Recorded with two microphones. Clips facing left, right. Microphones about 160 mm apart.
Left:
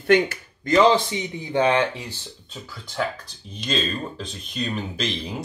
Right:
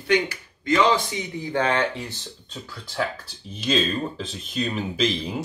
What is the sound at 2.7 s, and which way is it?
Speech, centre (ahead or behind).